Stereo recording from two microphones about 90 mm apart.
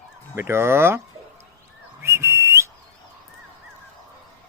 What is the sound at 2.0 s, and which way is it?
Whistle, 30° right (ahead or behind).